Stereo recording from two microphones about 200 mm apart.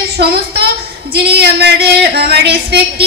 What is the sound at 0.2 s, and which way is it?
Speech, 50° right (ahead or behind).